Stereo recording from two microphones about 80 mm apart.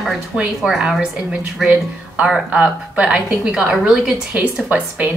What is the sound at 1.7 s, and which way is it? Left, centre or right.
A woman's voice, centre.